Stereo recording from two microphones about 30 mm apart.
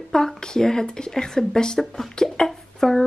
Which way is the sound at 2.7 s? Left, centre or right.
Centre.